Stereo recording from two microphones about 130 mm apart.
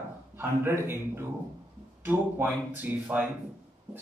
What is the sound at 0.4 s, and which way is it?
Speech, 20° right (ahead or behind).